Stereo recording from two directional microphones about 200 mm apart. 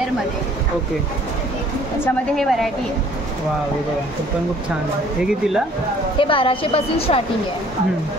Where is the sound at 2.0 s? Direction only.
Centre (ahead or behind).